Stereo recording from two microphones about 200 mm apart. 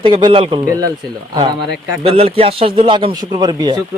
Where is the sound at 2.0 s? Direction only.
30° right (ahead or behind).